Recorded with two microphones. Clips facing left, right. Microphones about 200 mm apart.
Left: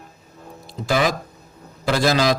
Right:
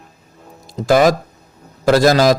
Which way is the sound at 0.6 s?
45° right (ahead or behind).